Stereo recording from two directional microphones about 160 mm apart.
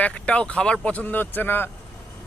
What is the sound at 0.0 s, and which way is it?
Speech, 5° left (ahead or behind).